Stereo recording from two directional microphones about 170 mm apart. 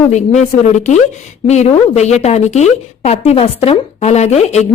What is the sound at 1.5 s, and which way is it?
A woman's voice, 40° left (ahead or behind).